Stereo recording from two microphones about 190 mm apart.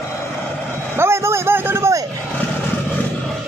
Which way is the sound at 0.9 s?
15° right (ahead or behind).